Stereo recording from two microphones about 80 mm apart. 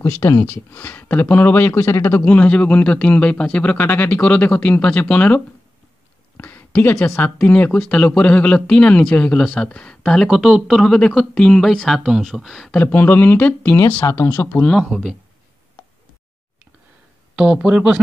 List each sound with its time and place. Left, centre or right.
0.0 s speech: left
0.4 s speech: left
2.2 s speech: centre
6.3 s a sound: left
7.4 s speech: centre
10.3 s speech: centre
12.7 s speech: left
14.0 s speech: left
14.4 s speech: left
14.7 s speech: centre
17.4 s speech: centre